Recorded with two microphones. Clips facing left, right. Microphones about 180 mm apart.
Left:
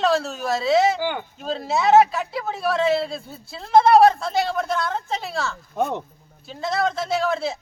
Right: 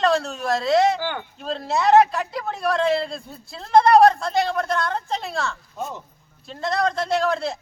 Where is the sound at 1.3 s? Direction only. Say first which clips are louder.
Right 3 dB; centre (ahead or behind).